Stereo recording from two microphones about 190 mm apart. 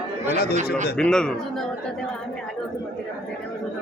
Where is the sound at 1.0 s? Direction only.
5° left (ahead or behind).